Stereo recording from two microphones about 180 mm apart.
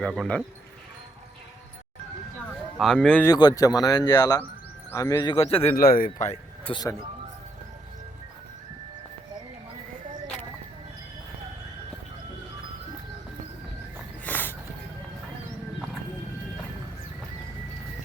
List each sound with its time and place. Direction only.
0.0 s speech: centre (ahead or behind)
2.7 s speech: centre (ahead or behind)
3.2 s speech: 20° left (ahead or behind)
5.7 s a man's voice: 55° left (ahead or behind)
6.7 s speech: 25° left (ahead or behind)
14.3 s a sound: 10° left (ahead or behind)